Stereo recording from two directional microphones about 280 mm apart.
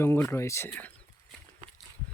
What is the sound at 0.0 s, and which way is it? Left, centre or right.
Speech, centre.